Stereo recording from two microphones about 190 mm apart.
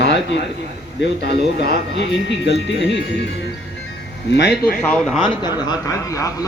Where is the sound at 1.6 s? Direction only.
65° left (ahead or behind).